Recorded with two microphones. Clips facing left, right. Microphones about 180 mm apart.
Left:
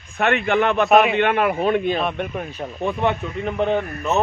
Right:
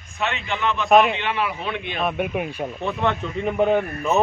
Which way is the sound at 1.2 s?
55° left (ahead or behind).